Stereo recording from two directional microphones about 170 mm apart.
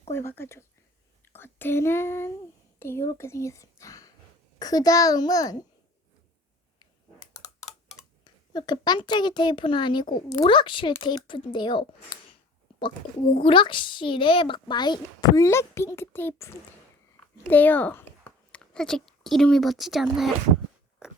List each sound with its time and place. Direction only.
0.1 s a woman's voice: 15° left (ahead or behind)
8.2 s a woman's voice: 25° left (ahead or behind)
13.4 s a woman's voice: 30° left (ahead or behind); by 20.3 s centre (ahead or behind)
21.0 s a sound: 5° right (ahead or behind)